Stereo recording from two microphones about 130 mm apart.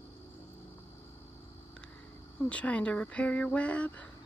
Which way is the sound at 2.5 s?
10° left (ahead or behind).